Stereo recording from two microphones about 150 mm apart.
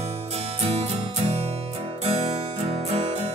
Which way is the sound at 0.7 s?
45° right (ahead or behind).